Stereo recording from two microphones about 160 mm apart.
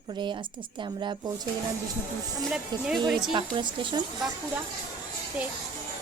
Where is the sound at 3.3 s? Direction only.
30° right (ahead or behind).